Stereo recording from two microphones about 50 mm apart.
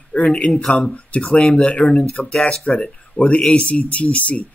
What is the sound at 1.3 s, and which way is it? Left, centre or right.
Speech, left.